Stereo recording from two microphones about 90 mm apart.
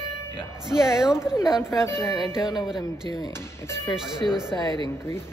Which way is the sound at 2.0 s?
35° left (ahead or behind).